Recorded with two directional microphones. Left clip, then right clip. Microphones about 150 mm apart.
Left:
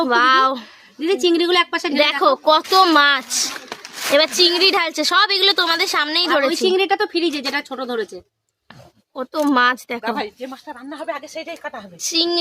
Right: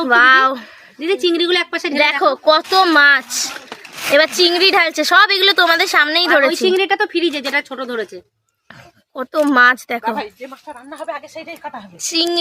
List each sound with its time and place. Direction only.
0.0 s a woman's voice: 5° right (ahead or behind)
9.1 s speech: 15° right (ahead or behind)
10.0 s a woman's voice: 50° left (ahead or behind)
12.0 s a woman's voice: centre (ahead or behind)